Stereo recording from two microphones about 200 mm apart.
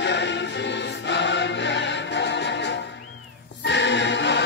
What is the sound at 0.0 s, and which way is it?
Music, 60° left (ahead or behind).